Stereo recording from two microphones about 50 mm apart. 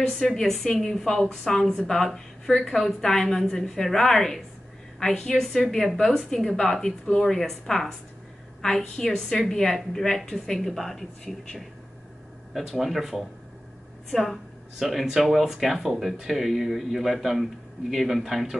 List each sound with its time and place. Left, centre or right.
0.3 s a woman's voice: centre
8.9 s a woman's voice: centre